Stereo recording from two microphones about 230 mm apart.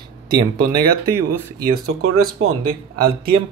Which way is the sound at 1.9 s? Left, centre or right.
Right.